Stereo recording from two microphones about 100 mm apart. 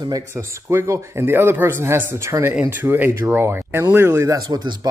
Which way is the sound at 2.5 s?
15° right (ahead or behind).